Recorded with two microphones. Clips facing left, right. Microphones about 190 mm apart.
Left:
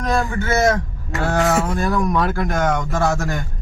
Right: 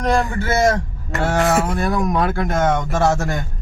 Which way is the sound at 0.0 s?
30° right (ahead or behind).